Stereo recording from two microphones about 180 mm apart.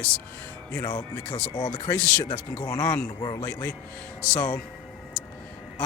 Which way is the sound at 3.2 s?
25° left (ahead or behind).